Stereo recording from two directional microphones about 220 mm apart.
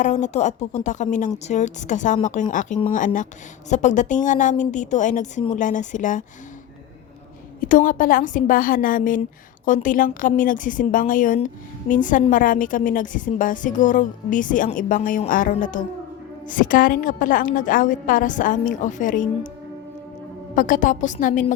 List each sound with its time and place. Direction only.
0.0 s a woman's voice: 35° left (ahead or behind)
7.6 s a woman's voice: 35° left (ahead or behind)
20.6 s a woman's voice: 35° left (ahead or behind)